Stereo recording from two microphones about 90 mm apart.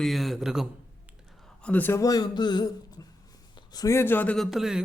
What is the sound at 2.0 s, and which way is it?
Speech, 45° left (ahead or behind).